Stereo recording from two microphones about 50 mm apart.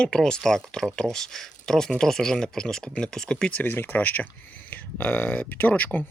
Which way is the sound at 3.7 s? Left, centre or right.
Left.